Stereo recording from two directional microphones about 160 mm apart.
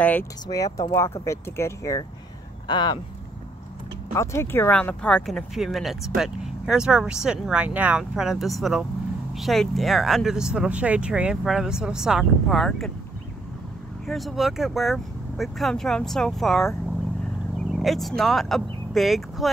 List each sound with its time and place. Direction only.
0.0 s speech: 10° left (ahead or behind); by 3.0 s 30° left (ahead or behind)
4.1 s speech: 15° left (ahead or behind); by 12.9 s centre (ahead or behind)
14.0 s speech: centre (ahead or behind)
17.7 s speech: centre (ahead or behind)